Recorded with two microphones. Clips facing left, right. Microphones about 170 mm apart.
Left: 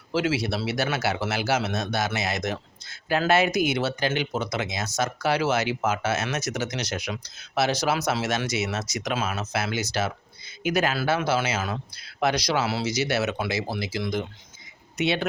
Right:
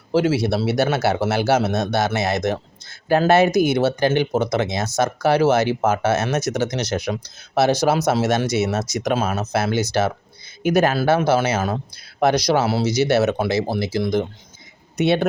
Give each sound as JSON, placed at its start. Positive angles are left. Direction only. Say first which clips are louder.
{"t": 0.1, "sound": "speech", "louder": "right 7 dB", "side_deg": -45}
{"t": 7.9, "sound": "speech", "louder": "right 7 dB", "side_deg": -45}
{"t": 9.9, "sound": "speech", "louder": "right 7 dB", "side_deg": -55}